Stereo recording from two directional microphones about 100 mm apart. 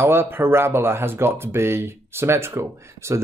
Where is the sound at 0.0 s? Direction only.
25° right (ahead or behind).